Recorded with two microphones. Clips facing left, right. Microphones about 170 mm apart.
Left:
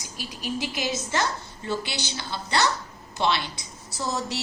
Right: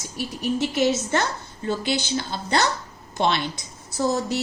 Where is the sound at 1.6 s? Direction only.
50° right (ahead or behind).